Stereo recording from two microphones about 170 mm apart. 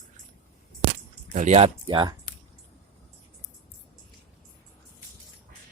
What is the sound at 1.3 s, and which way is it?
Speech, 40° right (ahead or behind).